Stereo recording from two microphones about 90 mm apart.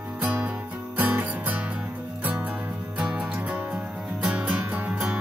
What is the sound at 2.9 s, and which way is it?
Music, 15° right (ahead or behind).